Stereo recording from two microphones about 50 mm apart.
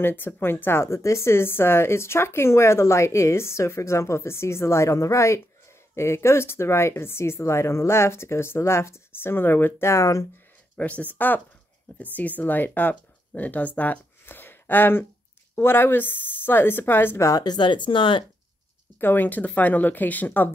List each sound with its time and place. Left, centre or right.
0.0 s speech: left
5.9 s speech: left
9.8 s speech: left
10.8 s speech: left
14.2 s a sound: left
15.5 s speech: left
18.9 s speech: left